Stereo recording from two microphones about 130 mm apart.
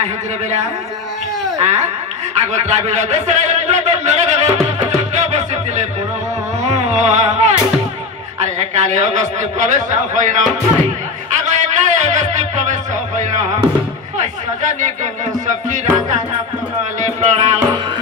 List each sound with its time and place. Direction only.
1.6 s a man's voice: 60° right (ahead or behind)
5.1 s music: 60° right (ahead or behind)
8.4 s a man's voice: 65° right (ahead or behind)
11.3 s music: 65° right (ahead or behind)
14.1 s speech: 70° right (ahead or behind)
15.4 s music: 70° right (ahead or behind)
17.0 s a man's voice: 65° right (ahead or behind)